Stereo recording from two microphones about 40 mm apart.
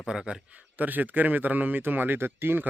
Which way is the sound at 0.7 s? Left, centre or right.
Right.